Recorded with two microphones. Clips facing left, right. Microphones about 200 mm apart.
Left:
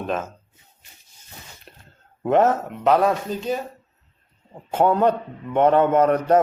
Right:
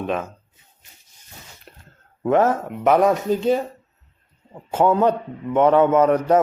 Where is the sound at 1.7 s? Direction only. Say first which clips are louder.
Right 1 dB; 25° left (ahead or behind).